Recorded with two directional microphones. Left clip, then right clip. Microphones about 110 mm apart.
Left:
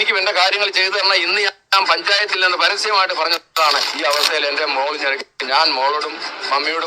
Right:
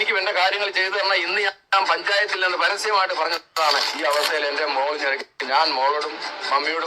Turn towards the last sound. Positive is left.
turn(degrees=45)  # may be behind; listen again after turning